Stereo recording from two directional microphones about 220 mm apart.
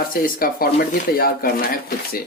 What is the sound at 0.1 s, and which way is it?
A man's voice, 40° left (ahead or behind).